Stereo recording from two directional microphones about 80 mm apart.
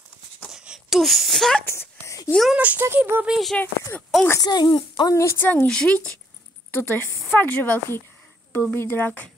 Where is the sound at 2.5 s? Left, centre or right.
Centre.